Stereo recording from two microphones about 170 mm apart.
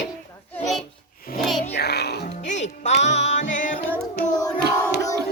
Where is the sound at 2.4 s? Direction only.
45° left (ahead or behind).